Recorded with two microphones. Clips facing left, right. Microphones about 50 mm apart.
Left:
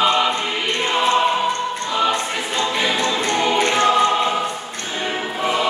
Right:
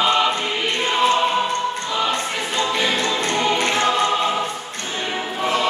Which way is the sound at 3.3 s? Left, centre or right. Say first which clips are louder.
Left 3 dB; centre.